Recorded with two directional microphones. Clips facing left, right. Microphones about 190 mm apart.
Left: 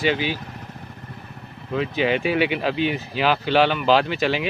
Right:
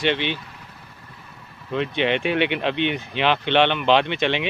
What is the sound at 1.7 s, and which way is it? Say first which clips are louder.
Speech: left 1 dB; 5° left (ahead or behind).